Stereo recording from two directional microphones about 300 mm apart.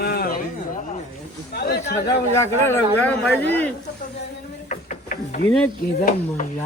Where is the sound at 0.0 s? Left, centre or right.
Left.